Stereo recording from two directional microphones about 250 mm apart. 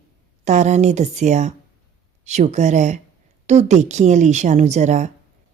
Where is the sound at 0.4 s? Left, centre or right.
Right.